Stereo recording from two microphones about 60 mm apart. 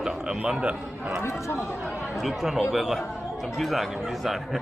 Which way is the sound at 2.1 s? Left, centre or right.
Centre.